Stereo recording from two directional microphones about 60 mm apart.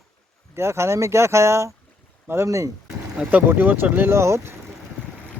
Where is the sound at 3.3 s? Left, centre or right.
Right.